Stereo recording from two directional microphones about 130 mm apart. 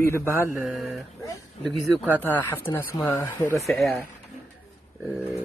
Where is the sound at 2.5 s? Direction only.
20° left (ahead or behind).